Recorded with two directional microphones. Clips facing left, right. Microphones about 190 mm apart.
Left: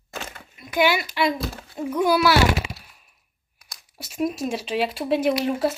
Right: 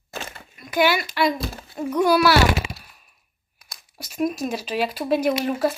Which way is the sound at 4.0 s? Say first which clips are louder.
Right 1 dB; 25° left (ahead or behind).